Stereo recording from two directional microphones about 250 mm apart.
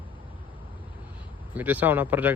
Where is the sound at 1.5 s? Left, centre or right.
Centre.